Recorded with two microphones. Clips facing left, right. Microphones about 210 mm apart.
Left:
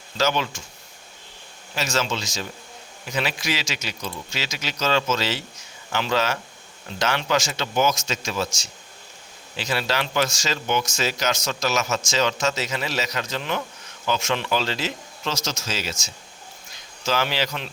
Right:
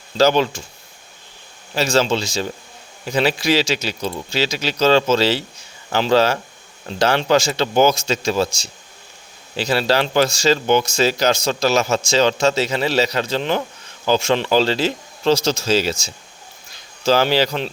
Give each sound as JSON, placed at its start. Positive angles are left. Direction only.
{"t": 0.2, "sound": "speech", "side_deg": -35}
{"t": 1.7, "sound": "speech", "side_deg": -35}